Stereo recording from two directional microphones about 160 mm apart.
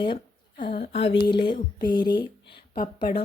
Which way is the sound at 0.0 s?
30° left (ahead or behind).